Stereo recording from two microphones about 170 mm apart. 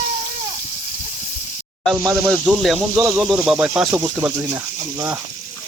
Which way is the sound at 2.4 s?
Centre (ahead or behind).